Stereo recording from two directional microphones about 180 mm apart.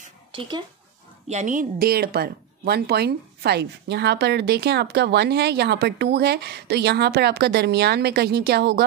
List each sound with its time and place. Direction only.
0.3 s speech: 25° right (ahead or behind)
1.3 s speech: 45° right (ahead or behind); by 8.8 s 65° right (ahead or behind)